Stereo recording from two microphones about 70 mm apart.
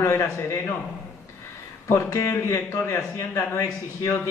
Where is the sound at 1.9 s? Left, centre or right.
Left.